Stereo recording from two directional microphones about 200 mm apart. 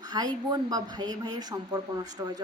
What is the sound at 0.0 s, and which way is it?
A woman's voice, 20° right (ahead or behind).